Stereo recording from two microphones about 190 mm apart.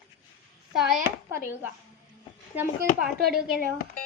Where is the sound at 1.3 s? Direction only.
10° right (ahead or behind).